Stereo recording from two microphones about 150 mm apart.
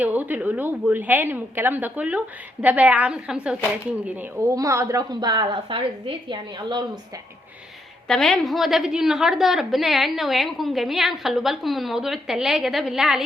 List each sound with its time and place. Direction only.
0.0 s a woman's voice: 10° right (ahead or behind)
4.5 s a woman's voice: 20° right (ahead or behind)
8.0 s a woman's voice: 5° left (ahead or behind)